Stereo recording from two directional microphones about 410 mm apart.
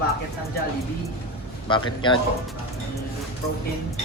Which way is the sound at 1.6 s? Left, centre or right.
Centre.